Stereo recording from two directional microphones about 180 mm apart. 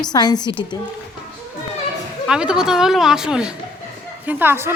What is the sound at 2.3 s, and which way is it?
Speech, 5° right (ahead or behind).